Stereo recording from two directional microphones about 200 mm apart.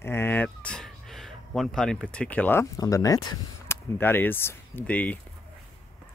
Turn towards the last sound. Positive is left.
turn(degrees=5)  # may be behind; listen again after turning